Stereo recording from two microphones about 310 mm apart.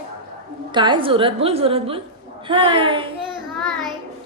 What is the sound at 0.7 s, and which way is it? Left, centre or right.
A woman's voice, centre.